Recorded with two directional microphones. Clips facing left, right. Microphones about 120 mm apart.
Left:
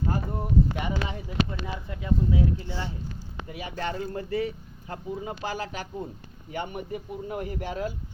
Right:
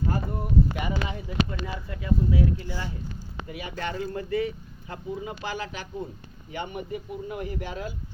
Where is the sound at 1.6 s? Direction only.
20° left (ahead or behind).